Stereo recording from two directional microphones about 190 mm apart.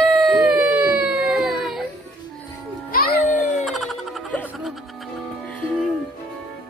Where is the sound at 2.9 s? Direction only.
50° left (ahead or behind).